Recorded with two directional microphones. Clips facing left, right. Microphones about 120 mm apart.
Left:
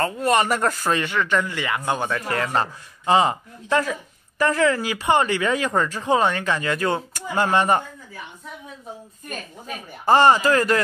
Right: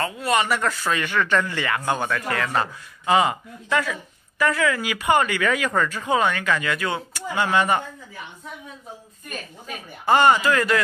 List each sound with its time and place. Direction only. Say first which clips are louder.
0.0 s speech: left 3 dB; 40° left (ahead or behind)
1.0 s speech: even; 20° left (ahead or behind)
2.2 s speech: left 1 dB; 30° left (ahead or behind)
10.0 s speech: left 2 dB; 35° left (ahead or behind)